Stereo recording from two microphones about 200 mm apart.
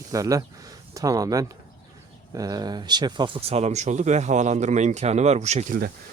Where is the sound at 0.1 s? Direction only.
15° right (ahead or behind); by 5.9 s 40° right (ahead or behind).